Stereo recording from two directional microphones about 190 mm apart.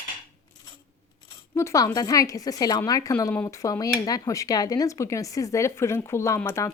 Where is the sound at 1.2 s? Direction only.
15° left (ahead or behind).